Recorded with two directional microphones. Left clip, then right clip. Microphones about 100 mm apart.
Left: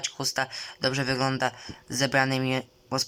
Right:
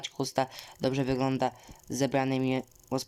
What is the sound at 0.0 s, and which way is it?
Speech, 35° right (ahead or behind).